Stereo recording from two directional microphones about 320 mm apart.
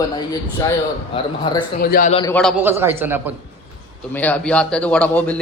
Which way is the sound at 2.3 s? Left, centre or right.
Centre.